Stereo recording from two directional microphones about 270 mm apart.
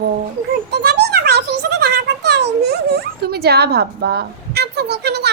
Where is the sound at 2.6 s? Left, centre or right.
Right.